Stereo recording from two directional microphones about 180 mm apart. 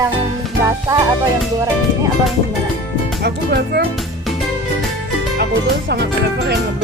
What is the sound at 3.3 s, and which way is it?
Speech, 60° right (ahead or behind).